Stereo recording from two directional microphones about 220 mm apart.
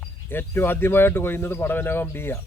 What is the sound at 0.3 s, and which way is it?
Speech, 10° left (ahead or behind).